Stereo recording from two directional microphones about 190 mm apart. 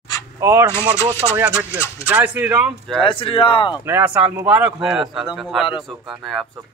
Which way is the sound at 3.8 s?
10° right (ahead or behind).